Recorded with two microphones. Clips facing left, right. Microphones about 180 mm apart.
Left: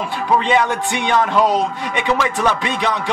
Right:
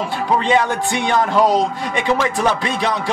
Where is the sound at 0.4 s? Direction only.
40° right (ahead or behind).